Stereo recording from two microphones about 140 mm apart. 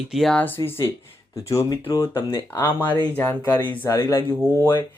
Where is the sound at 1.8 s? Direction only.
35° left (ahead or behind).